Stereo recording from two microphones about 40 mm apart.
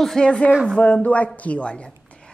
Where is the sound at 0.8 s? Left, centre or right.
Left.